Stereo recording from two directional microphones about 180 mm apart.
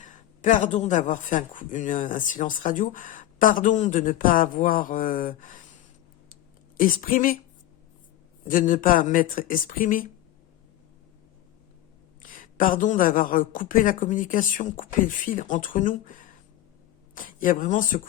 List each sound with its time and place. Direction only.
0.0 s a man's voice: 45° left (ahead or behind)
6.7 s a man's voice: 50° left (ahead or behind)
8.4 s a man's voice: 50° left (ahead or behind)
12.2 s a man's voice: 50° left (ahead or behind)